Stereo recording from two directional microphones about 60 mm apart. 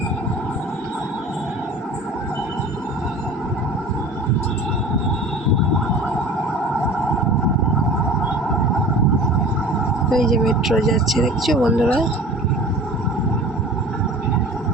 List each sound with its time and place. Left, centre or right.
10.1 s speech: centre